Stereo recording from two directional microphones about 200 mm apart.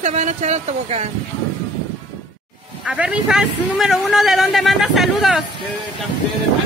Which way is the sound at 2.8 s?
5° right (ahead or behind).